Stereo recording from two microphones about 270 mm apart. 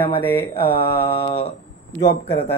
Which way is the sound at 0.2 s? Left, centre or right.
Centre.